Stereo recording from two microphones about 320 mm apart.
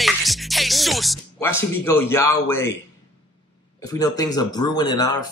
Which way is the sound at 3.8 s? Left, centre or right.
Centre.